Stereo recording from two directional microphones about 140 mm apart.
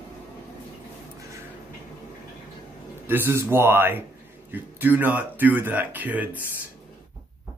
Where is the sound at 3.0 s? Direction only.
15° right (ahead or behind).